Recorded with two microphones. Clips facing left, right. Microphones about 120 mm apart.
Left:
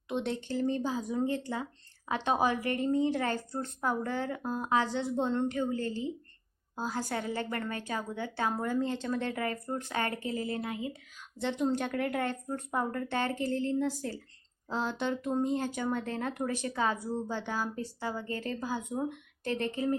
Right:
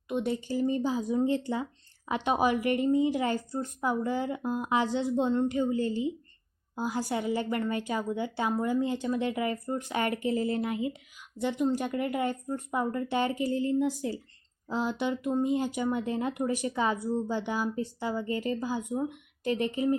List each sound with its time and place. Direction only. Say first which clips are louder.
0.1 s a woman's voice: right 3 dB; 5° right (ahead or behind); by 10.9 s 20° right (ahead or behind)
11.3 s a woman's voice: right 2 dB; 10° right (ahead or behind)